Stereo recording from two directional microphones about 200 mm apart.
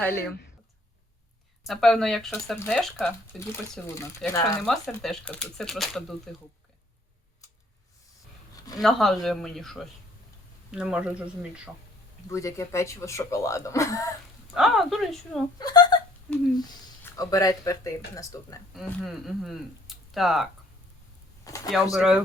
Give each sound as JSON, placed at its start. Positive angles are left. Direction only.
{"t": 0.1, "sound": "speech", "side_deg": 50}
{"t": 1.6, "sound": "speech", "side_deg": 0}
{"t": 3.5, "sound": "speech", "side_deg": 15}
{"t": 4.6, "sound": "speech", "side_deg": 0}
{"t": 8.8, "sound": "speech", "side_deg": 0}
{"t": 12.3, "sound": "speech", "side_deg": 15}
{"t": 14.5, "sound": "speech", "side_deg": 0}
{"t": 15.5, "sound": "speech", "side_deg": 20}
{"t": 17.0, "sound": "speech", "side_deg": 15}
{"t": 18.7, "sound": "speech", "side_deg": 0}
{"t": 21.4, "sound": "speech", "side_deg": 15}
{"t": 21.9, "sound": "speech", "side_deg": -5}